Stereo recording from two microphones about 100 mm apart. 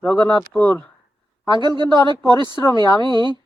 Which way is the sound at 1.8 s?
45° right (ahead or behind).